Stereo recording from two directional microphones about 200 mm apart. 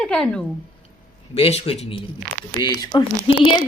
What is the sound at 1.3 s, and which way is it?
A woman's voice, 30° left (ahead or behind).